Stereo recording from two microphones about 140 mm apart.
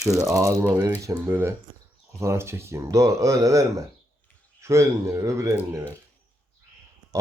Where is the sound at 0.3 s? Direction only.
25° right (ahead or behind).